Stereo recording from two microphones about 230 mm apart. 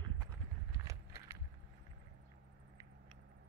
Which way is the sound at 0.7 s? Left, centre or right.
Centre.